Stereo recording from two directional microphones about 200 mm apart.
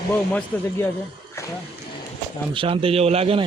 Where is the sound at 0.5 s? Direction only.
10° left (ahead or behind).